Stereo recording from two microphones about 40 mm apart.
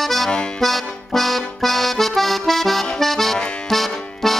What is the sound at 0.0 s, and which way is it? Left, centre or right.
Accordion, centre.